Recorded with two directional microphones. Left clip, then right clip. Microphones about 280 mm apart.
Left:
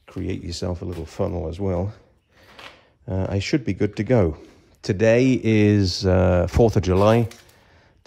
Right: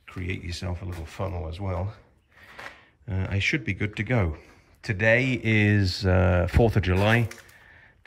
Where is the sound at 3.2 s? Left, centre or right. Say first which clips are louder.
Left 2 dB; centre.